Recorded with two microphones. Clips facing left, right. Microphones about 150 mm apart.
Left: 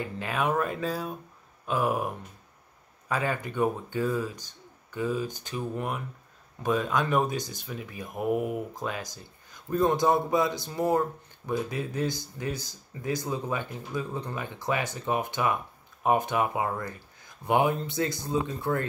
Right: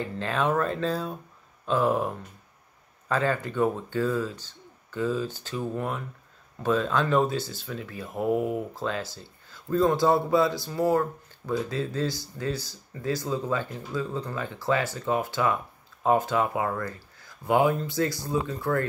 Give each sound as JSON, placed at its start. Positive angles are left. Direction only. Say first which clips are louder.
{"t": 0.0, "sound": "speech", "louder": "right 2 dB", "side_deg": 10}
{"t": 8.1, "sound": "speech", "louder": "right 2 dB", "side_deg": -25}
{"t": 8.7, "sound": "a man's voice", "louder": "right 3 dB", "side_deg": 15}